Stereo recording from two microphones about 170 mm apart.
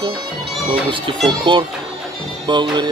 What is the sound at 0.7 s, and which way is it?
Speech, 30° right (ahead or behind).